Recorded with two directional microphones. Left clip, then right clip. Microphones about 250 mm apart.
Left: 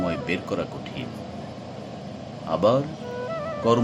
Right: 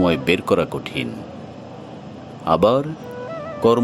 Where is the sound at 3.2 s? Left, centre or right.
Centre.